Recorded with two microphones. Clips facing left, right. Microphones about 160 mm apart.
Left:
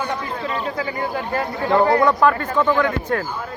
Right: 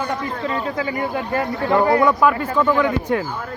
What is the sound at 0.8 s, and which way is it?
Speech, 25° right (ahead or behind).